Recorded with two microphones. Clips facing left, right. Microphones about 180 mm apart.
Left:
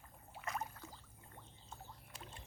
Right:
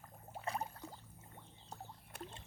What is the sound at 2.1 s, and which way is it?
Rowboat, 60° right (ahead or behind).